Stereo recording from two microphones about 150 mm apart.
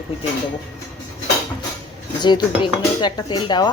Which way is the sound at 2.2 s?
30° left (ahead or behind).